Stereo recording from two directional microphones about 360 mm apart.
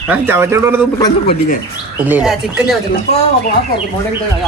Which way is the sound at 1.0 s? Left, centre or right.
Centre.